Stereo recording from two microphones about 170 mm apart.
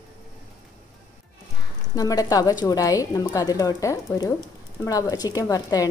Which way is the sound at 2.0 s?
20° left (ahead or behind).